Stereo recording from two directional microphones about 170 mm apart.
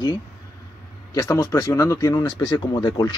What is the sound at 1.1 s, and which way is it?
Speech, 20° left (ahead or behind).